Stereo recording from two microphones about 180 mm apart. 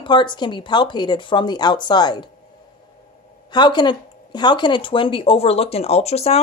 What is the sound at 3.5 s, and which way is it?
Speech, 25° left (ahead or behind).